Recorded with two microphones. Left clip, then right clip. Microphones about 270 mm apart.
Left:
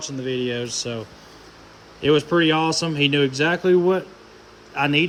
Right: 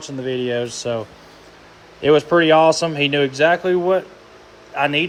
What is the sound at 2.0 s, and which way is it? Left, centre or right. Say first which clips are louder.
Speech: right 4 dB; centre.